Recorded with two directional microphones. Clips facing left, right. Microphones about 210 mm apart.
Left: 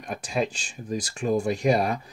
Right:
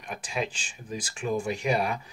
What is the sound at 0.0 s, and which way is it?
Speech, 40° left (ahead or behind).